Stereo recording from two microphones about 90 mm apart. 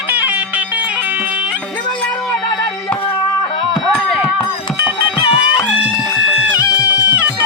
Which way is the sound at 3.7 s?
Centre (ahead or behind).